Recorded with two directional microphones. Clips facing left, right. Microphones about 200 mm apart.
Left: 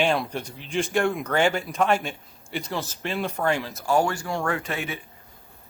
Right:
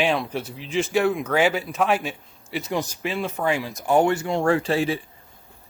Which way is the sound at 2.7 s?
15° right (ahead or behind).